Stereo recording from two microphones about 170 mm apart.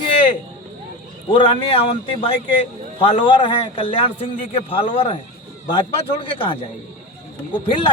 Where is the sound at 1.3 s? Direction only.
30° left (ahead or behind).